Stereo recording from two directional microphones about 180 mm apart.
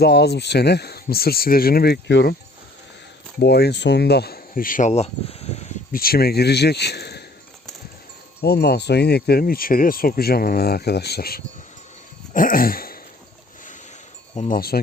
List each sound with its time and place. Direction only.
0.0 s speech: 65° left (ahead or behind)
3.4 s speech: 65° left (ahead or behind); by 5.7 s 35° left (ahead or behind)
5.9 s speech: 55° left (ahead or behind)
8.4 s speech: 60° left (ahead or behind)
12.3 s a sound: 50° left (ahead or behind)
14.3 s speech: 50° left (ahead or behind)